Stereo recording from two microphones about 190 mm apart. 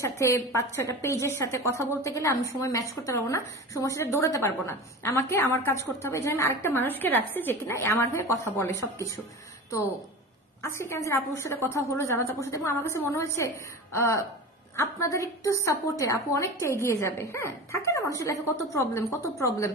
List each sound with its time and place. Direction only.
0.2 s a woman's voice: 15° left (ahead or behind)
10.6 s a woman's voice: 15° left (ahead or behind)